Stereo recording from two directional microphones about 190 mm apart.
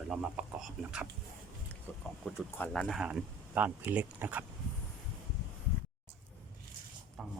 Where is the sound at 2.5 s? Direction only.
5° left (ahead or behind).